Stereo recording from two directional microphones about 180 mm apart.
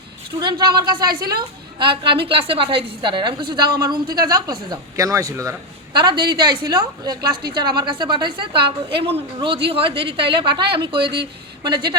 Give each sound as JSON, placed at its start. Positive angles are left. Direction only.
{"t": 0.3, "sound": "a woman's voice", "side_deg": -25}
{"t": 0.9, "sound": "a woman's voice", "side_deg": -55}
{"t": 1.4, "sound": "a woman's voice", "side_deg": -25}
{"t": 11.0, "sound": "a woman's voice", "side_deg": -65}
{"t": 11.6, "sound": "a woman's voice", "side_deg": -25}